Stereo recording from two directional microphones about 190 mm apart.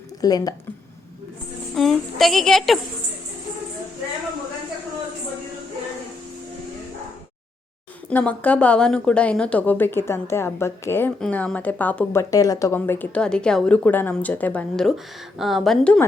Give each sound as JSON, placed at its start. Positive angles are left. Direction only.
{"t": 0.2, "sound": "speech", "side_deg": 20}
{"t": 1.7, "sound": "a woman's voice", "side_deg": 0}
{"t": 8.1, "sound": "a woman's voice", "side_deg": 5}